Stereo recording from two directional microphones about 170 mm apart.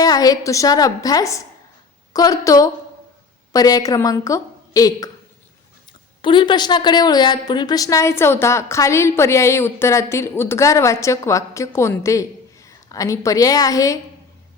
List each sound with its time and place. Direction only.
0.0 s a woman's voice: 20° left (ahead or behind)
6.2 s a woman's voice: 30° left (ahead or behind)